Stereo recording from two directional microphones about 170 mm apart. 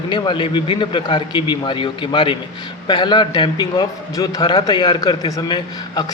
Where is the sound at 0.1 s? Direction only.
30° left (ahead or behind).